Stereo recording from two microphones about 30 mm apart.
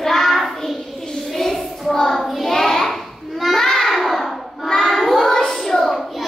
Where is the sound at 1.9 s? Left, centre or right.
Centre.